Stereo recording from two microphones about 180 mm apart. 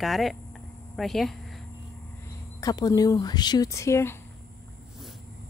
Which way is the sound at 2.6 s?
20° left (ahead or behind).